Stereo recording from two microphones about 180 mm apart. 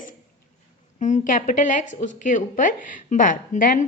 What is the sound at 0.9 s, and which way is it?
A woman's voice, 40° left (ahead or behind).